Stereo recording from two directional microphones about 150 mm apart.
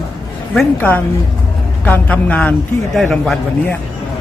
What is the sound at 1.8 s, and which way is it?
A man's voice, 10° left (ahead or behind).